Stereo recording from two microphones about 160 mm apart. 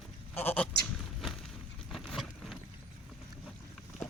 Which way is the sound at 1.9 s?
Centre (ahead or behind).